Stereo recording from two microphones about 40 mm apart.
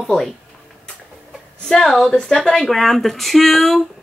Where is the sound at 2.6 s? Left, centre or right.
Centre.